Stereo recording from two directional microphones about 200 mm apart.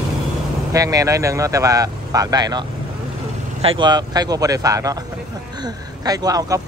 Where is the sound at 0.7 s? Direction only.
15° right (ahead or behind).